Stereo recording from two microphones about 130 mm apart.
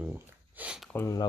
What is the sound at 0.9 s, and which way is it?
Speech, 20° left (ahead or behind).